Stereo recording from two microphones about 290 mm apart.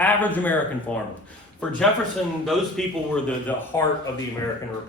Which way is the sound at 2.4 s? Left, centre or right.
Centre.